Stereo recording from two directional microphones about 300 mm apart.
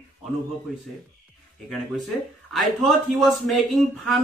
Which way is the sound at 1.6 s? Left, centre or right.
Centre.